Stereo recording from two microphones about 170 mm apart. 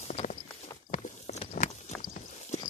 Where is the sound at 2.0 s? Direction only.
50° left (ahead or behind).